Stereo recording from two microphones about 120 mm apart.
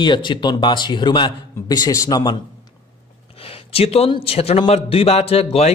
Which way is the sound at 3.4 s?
55° left (ahead or behind).